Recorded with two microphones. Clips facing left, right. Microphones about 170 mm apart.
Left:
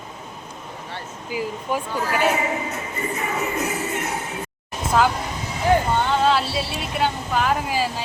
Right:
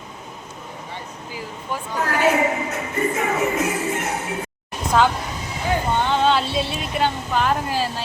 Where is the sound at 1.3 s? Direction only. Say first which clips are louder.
Left 6 dB; 15° left (ahead or behind).